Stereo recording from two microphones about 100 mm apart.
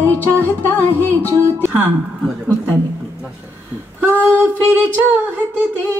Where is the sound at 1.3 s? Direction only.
25° right (ahead or behind).